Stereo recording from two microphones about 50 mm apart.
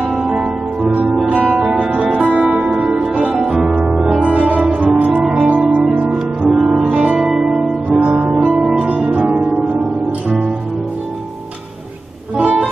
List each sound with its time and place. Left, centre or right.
1.1 s music: right
4.2 s music: right; by 8.0 s centre
8.0 s music: right
8.4 s music: centre
8.7 s music: right
9.2 s music: centre
12.4 s music: right